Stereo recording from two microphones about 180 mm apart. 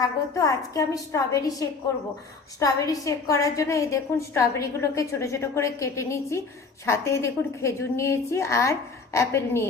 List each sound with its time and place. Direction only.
0.0 s a woman's voice: 20° left (ahead or behind)